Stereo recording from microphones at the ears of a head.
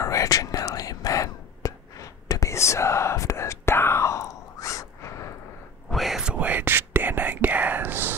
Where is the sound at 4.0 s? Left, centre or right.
Left.